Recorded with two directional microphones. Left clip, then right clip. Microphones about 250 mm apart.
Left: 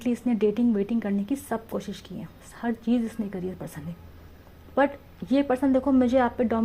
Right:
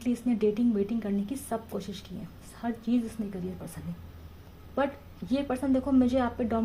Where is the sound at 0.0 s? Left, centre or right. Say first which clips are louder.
Left 3 dB; left.